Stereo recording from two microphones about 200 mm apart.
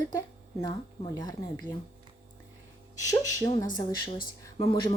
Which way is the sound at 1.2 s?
20° left (ahead or behind).